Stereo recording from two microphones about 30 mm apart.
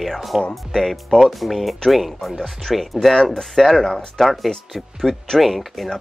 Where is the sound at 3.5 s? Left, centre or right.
Centre.